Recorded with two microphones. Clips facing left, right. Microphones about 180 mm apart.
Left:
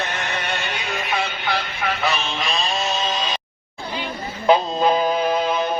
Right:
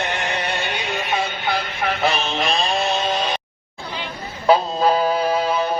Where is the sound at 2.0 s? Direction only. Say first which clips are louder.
Right 5 dB; 50° right (ahead or behind).